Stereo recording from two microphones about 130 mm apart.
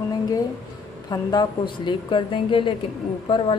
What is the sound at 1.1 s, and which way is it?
A woman's voice, 30° left (ahead or behind).